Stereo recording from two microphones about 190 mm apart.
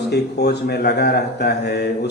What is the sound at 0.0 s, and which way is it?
Speech, 60° left (ahead or behind).